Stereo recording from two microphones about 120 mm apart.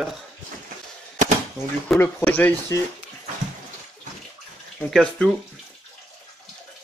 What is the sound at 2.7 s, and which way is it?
Speech, 25° left (ahead or behind).